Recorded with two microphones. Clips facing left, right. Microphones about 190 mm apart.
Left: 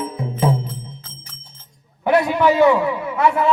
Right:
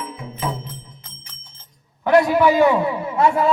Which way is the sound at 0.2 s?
30° left (ahead or behind).